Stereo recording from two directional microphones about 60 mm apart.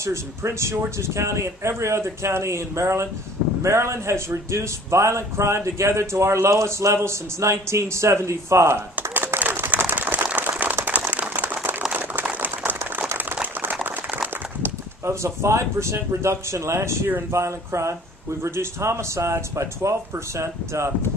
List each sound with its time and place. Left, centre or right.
0.0 s a man's voice: right
9.1 s a sound: right
15.0 s a man's voice: right